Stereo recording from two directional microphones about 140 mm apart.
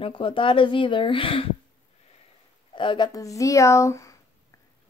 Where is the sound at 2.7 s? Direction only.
35° left (ahead or behind).